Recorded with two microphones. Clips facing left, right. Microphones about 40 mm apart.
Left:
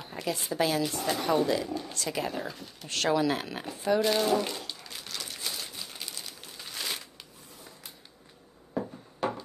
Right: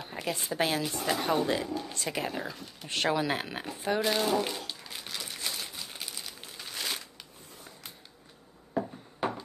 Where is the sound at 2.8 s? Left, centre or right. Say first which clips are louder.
Left 2 dB; centre.